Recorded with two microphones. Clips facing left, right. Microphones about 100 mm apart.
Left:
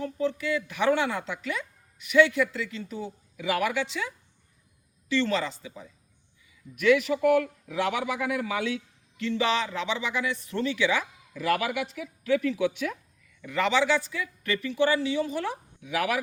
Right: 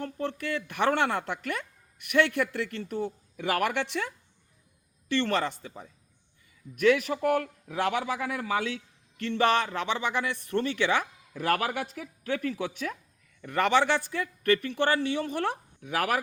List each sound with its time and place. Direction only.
0.0 s a woman's voice: 55° right (ahead or behind); by 8.8 s 35° right (ahead or behind)
9.1 s speech: 50° right (ahead or behind)
13.4 s speech: 50° right (ahead or behind)